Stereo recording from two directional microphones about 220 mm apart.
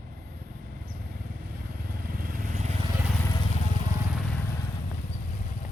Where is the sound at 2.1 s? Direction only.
40° right (ahead or behind).